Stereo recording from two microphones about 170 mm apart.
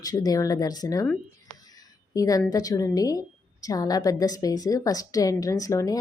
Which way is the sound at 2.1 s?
20° left (ahead or behind).